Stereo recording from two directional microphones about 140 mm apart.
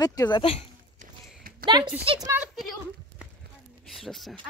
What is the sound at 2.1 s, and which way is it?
Speech, 40° right (ahead or behind).